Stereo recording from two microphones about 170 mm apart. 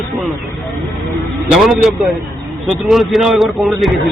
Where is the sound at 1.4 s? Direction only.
5° right (ahead or behind).